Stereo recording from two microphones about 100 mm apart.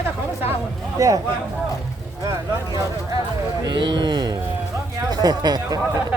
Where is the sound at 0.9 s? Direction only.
35° right (ahead or behind).